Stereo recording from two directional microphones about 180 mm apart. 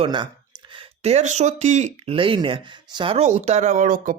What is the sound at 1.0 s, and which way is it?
Speech, 40° right (ahead or behind).